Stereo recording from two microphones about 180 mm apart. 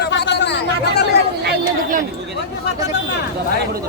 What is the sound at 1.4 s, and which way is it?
Speech, 50° right (ahead or behind).